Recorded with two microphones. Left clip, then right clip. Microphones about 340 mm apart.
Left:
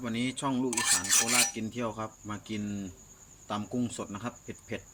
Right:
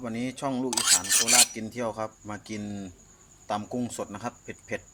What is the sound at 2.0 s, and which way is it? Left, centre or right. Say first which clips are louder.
Speech: right 4 dB; centre.